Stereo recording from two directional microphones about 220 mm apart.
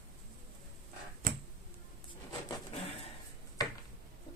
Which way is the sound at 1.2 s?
40° right (ahead or behind).